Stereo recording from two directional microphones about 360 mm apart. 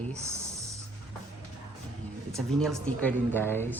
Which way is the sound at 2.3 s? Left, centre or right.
Centre.